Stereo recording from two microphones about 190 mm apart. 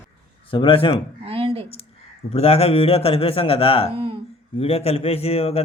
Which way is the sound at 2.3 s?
35° left (ahead or behind).